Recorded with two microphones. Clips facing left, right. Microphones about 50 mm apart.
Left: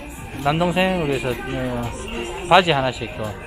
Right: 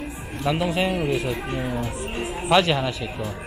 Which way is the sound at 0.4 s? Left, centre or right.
Centre.